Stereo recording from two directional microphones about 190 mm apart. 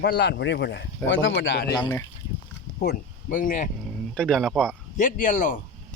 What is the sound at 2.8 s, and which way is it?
Speech, 45° left (ahead or behind).